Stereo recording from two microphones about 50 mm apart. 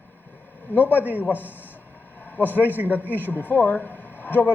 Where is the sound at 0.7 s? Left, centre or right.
Left.